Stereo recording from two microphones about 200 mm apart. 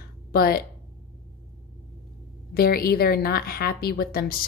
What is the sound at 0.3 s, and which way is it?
Speech, 50° left (ahead or behind).